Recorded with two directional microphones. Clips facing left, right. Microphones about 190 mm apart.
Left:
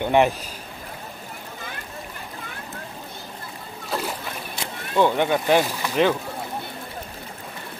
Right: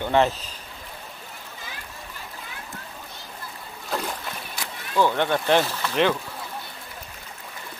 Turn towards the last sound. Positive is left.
turn(degrees=10)  # may be behind; listen again after turning